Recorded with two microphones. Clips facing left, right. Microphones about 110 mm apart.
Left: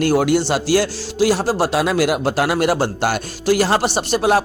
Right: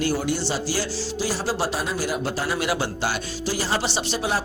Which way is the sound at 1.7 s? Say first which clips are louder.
Left 9 dB; 85° left.